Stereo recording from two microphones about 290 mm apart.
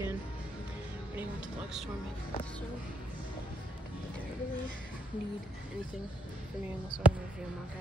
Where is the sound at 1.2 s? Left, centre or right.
Centre.